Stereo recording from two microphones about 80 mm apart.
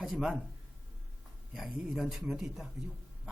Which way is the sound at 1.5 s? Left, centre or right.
Centre.